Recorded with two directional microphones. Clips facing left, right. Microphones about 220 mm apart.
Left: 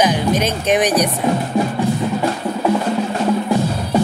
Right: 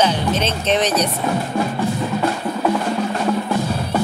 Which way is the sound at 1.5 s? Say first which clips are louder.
Left 3 dB; 15° left (ahead or behind).